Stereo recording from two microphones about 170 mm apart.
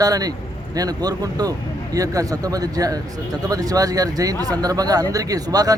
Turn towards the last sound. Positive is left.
turn(degrees=-20)  # may be behind; listen again after turning